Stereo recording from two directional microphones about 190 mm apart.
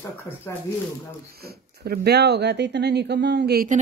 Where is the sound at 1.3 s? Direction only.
55° right (ahead or behind).